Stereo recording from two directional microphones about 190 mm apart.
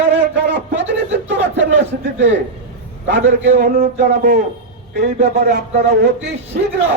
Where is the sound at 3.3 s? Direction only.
35° right (ahead or behind).